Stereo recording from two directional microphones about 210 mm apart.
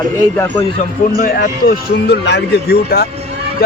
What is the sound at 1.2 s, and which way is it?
Speech, 45° left (ahead or behind).